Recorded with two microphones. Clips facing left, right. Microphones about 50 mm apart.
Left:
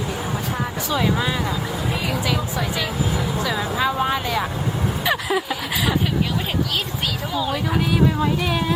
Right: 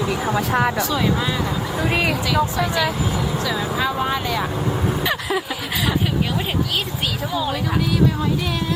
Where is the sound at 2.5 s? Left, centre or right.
Centre.